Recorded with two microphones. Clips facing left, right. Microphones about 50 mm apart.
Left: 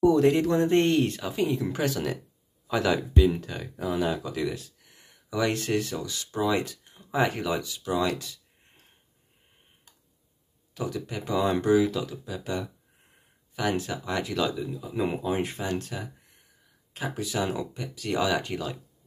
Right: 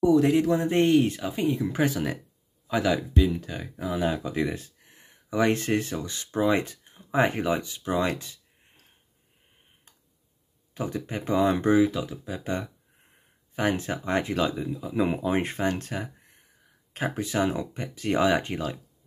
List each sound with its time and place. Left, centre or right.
0.1 s speech: centre
1.7 s speech: centre
2.9 s speech: centre
3.3 s speech: centre
4.1 s speech: right
10.7 s speech: right